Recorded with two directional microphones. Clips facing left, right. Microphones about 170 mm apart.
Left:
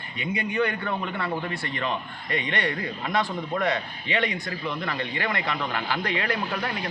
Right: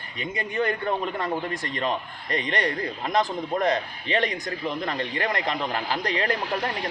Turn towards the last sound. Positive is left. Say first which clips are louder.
# right 2 dB
turn(degrees=-40)  # may be behind; listen again after turning